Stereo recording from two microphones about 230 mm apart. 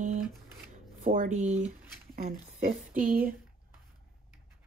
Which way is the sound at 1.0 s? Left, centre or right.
Right.